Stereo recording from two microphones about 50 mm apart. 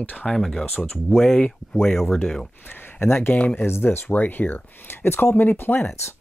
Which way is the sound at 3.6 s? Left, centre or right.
Left.